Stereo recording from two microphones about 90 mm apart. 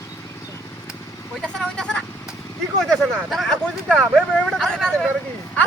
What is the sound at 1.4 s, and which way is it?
Speech, 10° left (ahead or behind).